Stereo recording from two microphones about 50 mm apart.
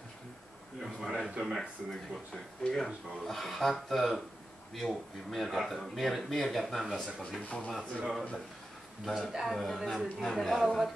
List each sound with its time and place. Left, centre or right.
0.8 s a sound: centre
1.4 s speech: centre
7.4 s speech: left
8.0 s speech: centre
9.3 s speech: centre